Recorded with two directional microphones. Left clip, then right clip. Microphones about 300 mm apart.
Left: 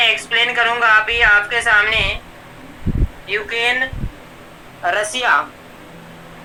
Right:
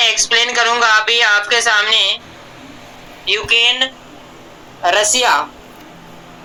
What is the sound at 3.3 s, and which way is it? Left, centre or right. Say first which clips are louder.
Speech: right 5 dB; right.